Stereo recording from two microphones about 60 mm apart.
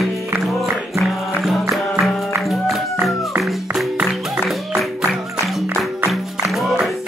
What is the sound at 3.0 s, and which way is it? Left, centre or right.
Music, right.